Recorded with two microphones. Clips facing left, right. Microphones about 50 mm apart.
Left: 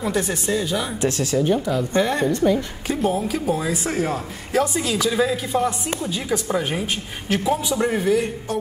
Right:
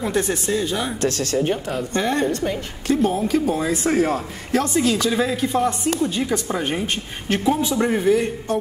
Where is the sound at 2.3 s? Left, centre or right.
Centre.